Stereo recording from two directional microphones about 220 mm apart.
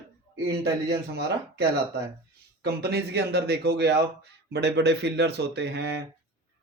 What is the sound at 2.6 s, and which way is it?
A man's voice, 45° right (ahead or behind).